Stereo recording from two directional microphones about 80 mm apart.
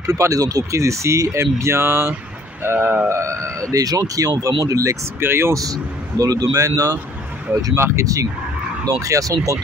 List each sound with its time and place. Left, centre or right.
0.0 s speech: right
3.7 s a man's voice: right
5.2 s speech: right
5.6 s a man's voice: right